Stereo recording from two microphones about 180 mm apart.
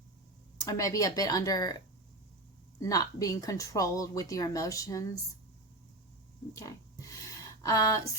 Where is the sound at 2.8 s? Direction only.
20° left (ahead or behind).